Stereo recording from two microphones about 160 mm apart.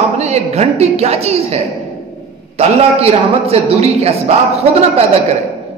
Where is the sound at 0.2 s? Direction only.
40° right (ahead or behind).